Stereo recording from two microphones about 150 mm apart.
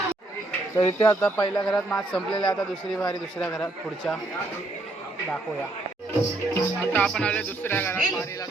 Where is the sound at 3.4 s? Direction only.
10° left (ahead or behind).